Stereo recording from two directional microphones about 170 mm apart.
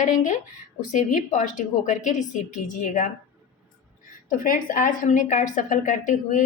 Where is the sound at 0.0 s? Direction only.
50° left (ahead or behind).